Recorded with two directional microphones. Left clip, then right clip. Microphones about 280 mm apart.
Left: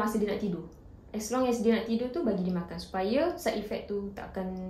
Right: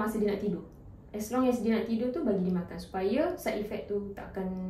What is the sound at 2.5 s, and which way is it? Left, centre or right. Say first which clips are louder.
A woman's voice: left 1 dB; left.